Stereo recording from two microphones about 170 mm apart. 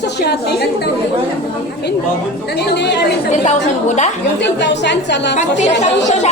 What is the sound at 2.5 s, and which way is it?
Speech, 80° left.